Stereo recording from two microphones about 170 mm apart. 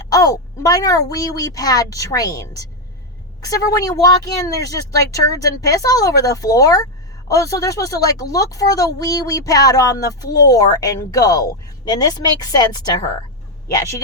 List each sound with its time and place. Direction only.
0.0 s speech: 20° left (ahead or behind)